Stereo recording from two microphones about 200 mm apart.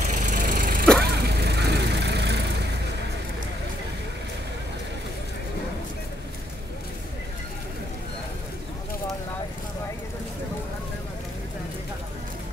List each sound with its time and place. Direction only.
0.1 s vehicle: 40° right (ahead or behind); by 2.4 s 55° right (ahead or behind)